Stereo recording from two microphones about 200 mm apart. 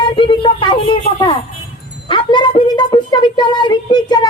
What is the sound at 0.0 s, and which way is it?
A woman's voice, 25° left (ahead or behind).